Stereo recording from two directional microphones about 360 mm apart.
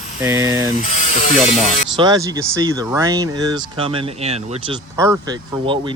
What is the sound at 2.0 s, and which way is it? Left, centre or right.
Speech, centre.